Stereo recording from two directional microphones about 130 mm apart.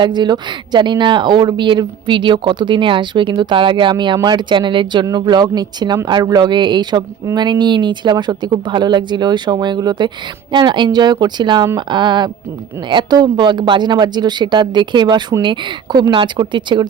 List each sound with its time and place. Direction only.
0.0 s speech: 35° right (ahead or behind)